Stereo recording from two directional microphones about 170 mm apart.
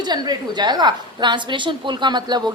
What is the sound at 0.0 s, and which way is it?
A woman's voice, 25° right (ahead or behind).